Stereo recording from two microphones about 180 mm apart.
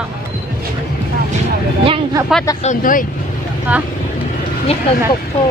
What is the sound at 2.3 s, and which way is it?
Speech, centre (ahead or behind).